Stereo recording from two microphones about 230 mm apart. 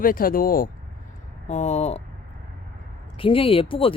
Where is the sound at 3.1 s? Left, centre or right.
Left.